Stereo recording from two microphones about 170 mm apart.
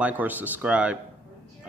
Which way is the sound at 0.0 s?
10° right (ahead or behind).